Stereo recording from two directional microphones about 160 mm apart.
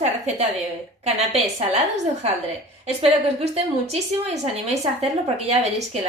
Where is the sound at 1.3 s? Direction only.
45° right (ahead or behind).